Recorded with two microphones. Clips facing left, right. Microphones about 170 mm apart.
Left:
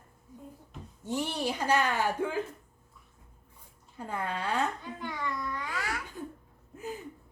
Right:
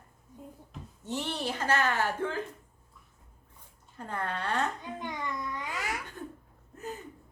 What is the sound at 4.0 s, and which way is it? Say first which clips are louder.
Speech: left 1 dB; 10° left (ahead or behind).